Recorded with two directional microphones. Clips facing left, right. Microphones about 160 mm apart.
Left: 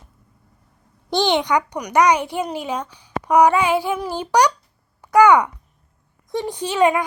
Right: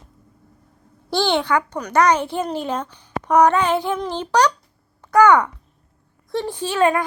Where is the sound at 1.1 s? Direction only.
20° left (ahead or behind).